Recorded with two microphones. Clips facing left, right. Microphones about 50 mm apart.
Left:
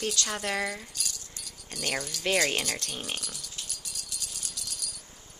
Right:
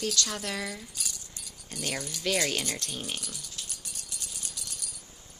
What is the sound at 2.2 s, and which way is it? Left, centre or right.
Speech, left.